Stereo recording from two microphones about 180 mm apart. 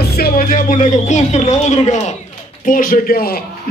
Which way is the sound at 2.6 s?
50° left (ahead or behind).